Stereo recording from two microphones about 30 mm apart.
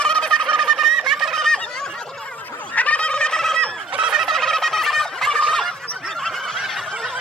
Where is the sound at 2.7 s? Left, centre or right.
Left.